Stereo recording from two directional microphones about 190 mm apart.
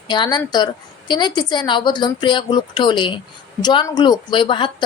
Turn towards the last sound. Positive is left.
turn(degrees=25)  # may be behind; listen again after turning